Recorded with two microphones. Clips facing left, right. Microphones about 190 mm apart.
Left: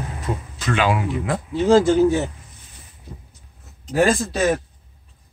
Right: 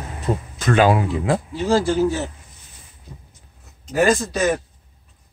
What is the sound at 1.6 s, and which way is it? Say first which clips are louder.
Speech: left 4 dB; 20° left (ahead or behind).